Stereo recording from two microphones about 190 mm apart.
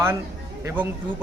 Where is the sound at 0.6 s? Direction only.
10° right (ahead or behind).